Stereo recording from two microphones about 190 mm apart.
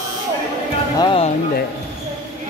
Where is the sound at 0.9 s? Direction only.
30° left (ahead or behind).